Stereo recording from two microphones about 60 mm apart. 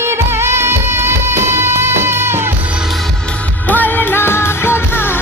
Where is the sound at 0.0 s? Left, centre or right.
Right.